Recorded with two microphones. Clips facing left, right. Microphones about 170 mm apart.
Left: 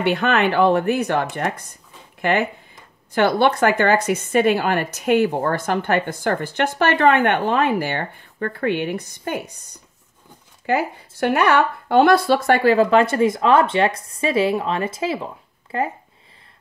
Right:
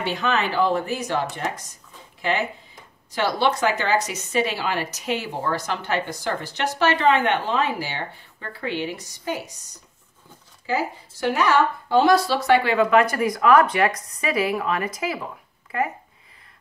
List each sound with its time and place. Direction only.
0.0 s a woman's voice: 60° left (ahead or behind); by 15.9 s 30° left (ahead or behind)